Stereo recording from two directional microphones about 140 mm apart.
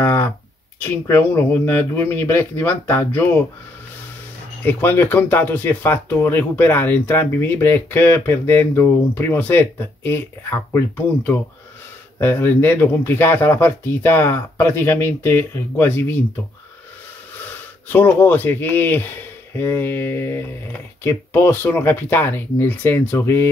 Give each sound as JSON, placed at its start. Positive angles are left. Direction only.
{"t": 0.0, "sound": "a sound", "side_deg": 15}
{"t": 0.7, "sound": "speech", "side_deg": 15}
{"t": 4.6, "sound": "speech", "side_deg": 15}
{"t": 12.2, "sound": "speech", "side_deg": 15}
{"t": 17.5, "sound": "speech", "side_deg": 10}